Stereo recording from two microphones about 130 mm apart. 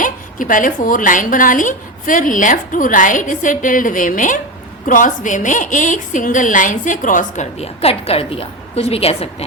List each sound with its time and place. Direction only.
0.0 s a woman's voice: 90° left
7.6 s a woman's voice: 50° left (ahead or behind)